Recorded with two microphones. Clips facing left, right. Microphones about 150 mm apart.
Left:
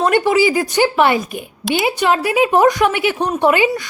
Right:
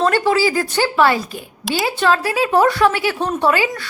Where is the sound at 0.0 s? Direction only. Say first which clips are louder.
Left 2 dB; 15° left (ahead or behind).